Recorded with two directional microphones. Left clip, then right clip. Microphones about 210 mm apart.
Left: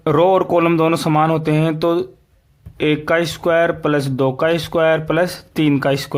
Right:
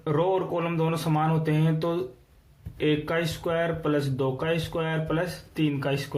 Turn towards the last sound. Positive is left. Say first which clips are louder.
# left 12 dB
turn(degrees=45)  # may be behind; listen again after turning